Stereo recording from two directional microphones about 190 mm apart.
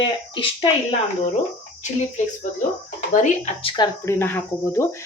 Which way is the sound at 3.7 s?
15° left (ahead or behind).